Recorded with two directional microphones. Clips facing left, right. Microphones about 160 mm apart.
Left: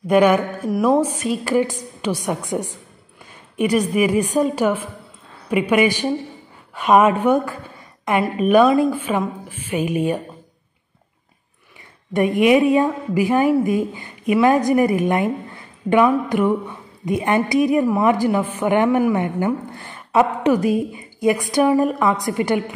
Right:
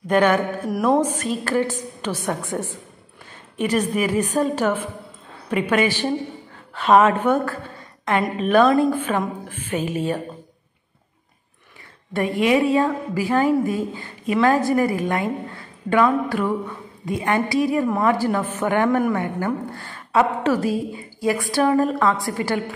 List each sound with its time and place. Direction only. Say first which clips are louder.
0.0 s a woman's voice: left 3 dB; 10° left (ahead or behind)
12.1 s a woman's voice: left 4 dB; 15° left (ahead or behind)
19.1 s a woman's voice: left 3 dB; 20° left (ahead or behind)